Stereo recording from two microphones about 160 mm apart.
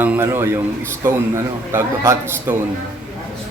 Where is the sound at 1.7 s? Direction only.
15° right (ahead or behind).